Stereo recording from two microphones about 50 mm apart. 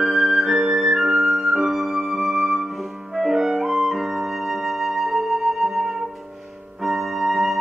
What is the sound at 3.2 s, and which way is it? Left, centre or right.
Clarinet, centre.